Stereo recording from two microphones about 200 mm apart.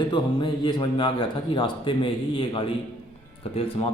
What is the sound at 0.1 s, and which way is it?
A man's voice, 25° left (ahead or behind).